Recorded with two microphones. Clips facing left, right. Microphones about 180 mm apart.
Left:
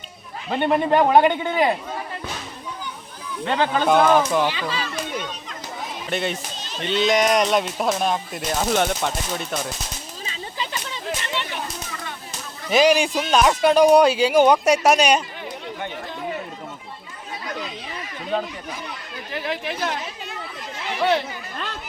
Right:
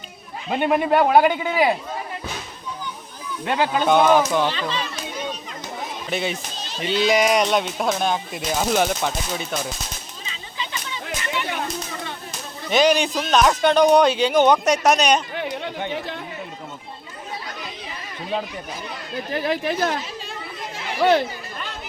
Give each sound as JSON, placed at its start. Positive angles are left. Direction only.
{"t": 0.5, "sound": "speech", "side_deg": -10}
{"t": 3.4, "sound": "speech", "side_deg": -10}
{"t": 3.8, "sound": "speech", "side_deg": 5}
{"t": 4.4, "sound": "speech", "side_deg": 10}
{"t": 6.1, "sound": "speech", "side_deg": 0}
{"t": 10.2, "sound": "a sound", "side_deg": 40}
{"t": 12.7, "sound": "speech", "side_deg": 5}
{"t": 19.3, "sound": "speech", "side_deg": -40}